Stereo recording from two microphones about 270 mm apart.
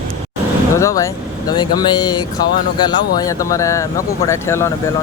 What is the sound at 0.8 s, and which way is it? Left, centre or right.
Speech, centre.